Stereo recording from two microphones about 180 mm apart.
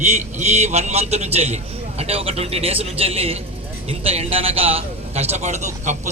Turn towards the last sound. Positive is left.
turn(degrees=-40)  # may be behind; listen again after turning